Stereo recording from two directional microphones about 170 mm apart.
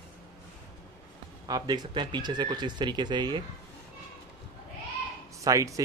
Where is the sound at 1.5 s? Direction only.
25° right (ahead or behind).